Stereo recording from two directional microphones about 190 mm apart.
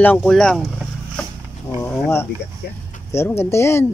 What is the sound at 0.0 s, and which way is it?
Speech, 5° left (ahead or behind).